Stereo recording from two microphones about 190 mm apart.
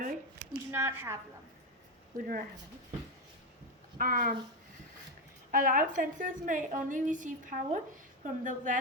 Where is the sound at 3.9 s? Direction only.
45° right (ahead or behind).